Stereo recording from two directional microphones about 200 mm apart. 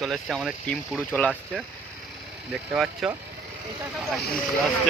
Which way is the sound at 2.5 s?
5° right (ahead or behind).